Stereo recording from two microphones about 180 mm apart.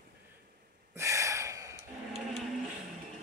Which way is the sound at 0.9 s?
15° right (ahead or behind).